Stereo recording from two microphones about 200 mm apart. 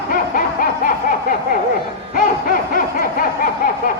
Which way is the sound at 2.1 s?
45° left (ahead or behind).